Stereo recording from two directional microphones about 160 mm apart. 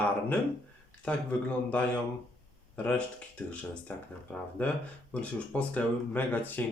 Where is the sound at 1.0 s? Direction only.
10° left (ahead or behind).